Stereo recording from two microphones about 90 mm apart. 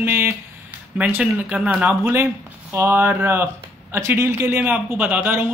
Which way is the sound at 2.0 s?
25° right (ahead or behind).